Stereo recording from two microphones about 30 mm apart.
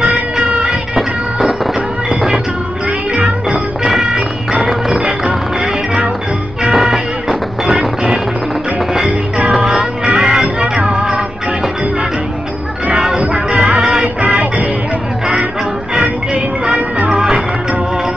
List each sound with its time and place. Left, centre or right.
0.1 s music: right
2.0 s music: centre
4.6 s music: centre
6.7 s music: centre
9.5 s music: centre
12.9 s music: centre
17.1 s music: centre